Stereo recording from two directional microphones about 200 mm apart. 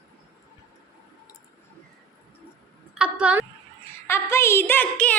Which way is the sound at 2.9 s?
5° right (ahead or behind).